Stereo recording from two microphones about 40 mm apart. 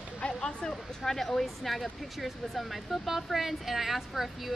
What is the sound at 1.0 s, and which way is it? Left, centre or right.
Speech, centre.